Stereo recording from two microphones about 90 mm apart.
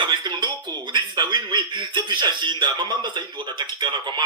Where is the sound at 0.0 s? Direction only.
60° right (ahead or behind).